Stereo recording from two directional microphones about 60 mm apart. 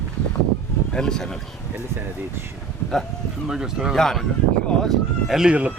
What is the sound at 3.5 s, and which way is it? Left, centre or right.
Speech, centre.